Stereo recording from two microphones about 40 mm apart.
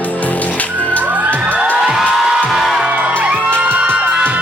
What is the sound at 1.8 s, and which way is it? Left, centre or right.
Music, centre.